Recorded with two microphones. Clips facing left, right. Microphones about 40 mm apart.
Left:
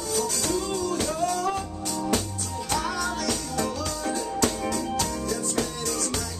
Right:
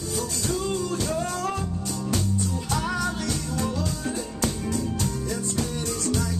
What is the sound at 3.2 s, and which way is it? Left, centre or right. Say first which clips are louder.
Music: left 1 dB; left.